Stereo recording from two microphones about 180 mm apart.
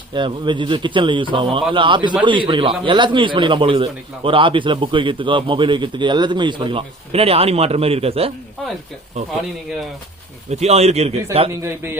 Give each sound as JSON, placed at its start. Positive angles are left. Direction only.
{"t": 0.1, "sound": "a man's voice", "side_deg": -25}
{"t": 10.5, "sound": "speech", "side_deg": -35}
{"t": 11.6, "sound": "a man's voice", "side_deg": -10}